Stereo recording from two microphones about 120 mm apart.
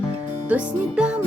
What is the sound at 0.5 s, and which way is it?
Music, 10° right (ahead or behind).